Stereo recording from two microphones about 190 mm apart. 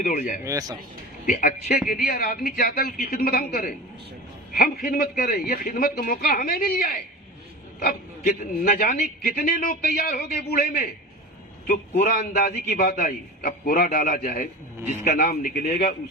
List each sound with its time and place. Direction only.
0.0 s a man's voice: 45° left (ahead or behind)
0.4 s speech: 20° right (ahead or behind)
1.3 s a man's voice: 45° left (ahead or behind)